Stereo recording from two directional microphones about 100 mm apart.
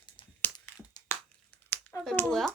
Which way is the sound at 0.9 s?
45° left (ahead or behind).